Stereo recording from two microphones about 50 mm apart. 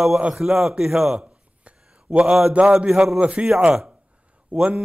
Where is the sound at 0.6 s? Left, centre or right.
Centre.